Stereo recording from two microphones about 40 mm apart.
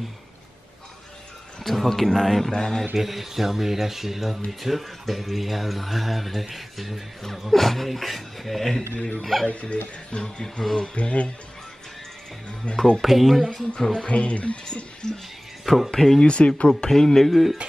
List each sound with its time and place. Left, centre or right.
1.6 s speech: centre
3.0 s speech: centre
9.5 s speech: left
10.1 s speech: centre
10.8 s speech: left
12.6 s speech: left
13.0 s speech: centre
14.0 s speech: left
15.0 s speech: centre
15.6 s speech: centre
16.2 s speech: left
16.6 s speech: centre